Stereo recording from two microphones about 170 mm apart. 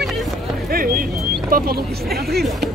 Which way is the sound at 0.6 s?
60° right (ahead or behind).